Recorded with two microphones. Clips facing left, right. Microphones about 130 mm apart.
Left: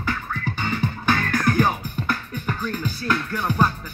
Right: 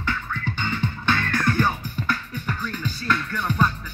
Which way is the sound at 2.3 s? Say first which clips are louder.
Left 2 dB; 45° left (ahead or behind).